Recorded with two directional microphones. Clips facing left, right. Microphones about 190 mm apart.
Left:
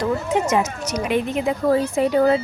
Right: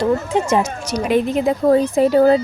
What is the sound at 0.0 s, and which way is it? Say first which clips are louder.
A woman's voice: right 3 dB; 30° right (ahead or behind).